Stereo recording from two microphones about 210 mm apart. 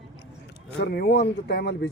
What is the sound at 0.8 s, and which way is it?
Speech, 50° left (ahead or behind).